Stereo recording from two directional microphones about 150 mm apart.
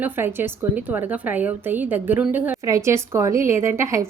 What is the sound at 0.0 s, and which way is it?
A woman's voice, 15° right (ahead or behind).